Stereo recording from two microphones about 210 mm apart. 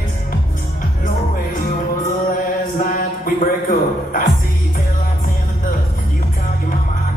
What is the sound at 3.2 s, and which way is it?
Music, 40° left (ahead or behind).